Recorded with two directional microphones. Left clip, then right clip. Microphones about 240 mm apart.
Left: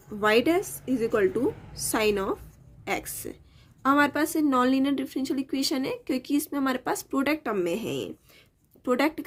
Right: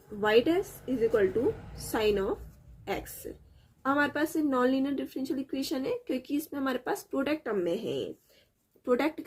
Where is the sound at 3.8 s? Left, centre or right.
Left.